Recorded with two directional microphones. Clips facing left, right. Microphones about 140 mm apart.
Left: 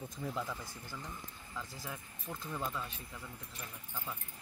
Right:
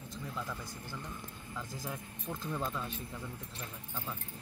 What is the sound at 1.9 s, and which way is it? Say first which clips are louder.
Speech: right 4 dB; 20° right (ahead or behind).